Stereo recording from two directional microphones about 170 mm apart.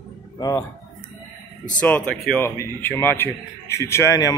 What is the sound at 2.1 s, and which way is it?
A man's voice, 10° left (ahead or behind).